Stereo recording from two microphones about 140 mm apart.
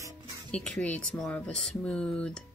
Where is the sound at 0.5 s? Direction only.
5° left (ahead or behind).